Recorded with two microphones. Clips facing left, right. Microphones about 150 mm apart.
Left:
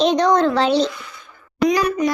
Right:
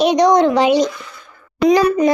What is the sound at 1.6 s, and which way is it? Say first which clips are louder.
Speech: right 5 dB; 30° right (ahead or behind).